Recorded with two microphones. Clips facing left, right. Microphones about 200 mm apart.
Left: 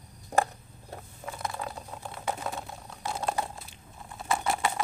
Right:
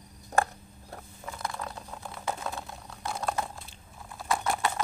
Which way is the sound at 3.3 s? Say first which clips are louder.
Left 1 dB; 5° left (ahead or behind).